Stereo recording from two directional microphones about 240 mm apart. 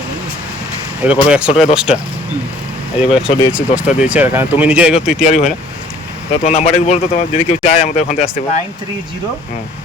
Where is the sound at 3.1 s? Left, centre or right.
Centre.